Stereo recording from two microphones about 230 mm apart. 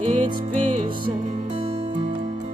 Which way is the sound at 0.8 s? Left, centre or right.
Right.